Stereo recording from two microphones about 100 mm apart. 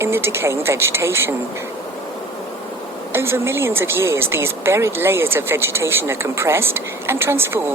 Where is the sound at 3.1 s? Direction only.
25° right (ahead or behind).